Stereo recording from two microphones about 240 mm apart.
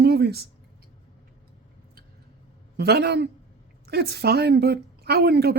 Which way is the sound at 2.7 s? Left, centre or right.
Right.